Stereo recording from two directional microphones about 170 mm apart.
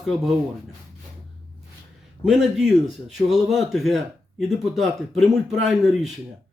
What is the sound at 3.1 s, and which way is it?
Speech, centre (ahead or behind).